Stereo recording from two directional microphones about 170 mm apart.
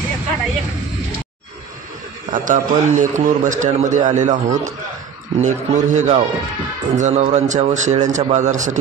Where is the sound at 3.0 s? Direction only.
45° right (ahead or behind).